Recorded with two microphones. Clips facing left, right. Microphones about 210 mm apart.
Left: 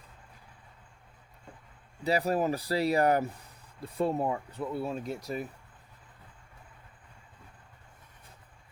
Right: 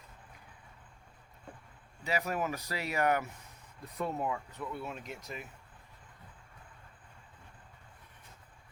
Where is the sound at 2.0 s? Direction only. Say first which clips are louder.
Left 6 dB; 35° left (ahead or behind).